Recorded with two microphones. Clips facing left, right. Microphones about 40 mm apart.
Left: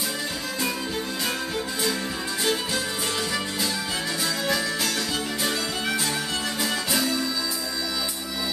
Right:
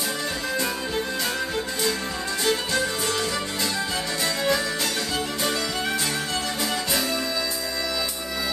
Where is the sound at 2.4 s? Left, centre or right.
Centre.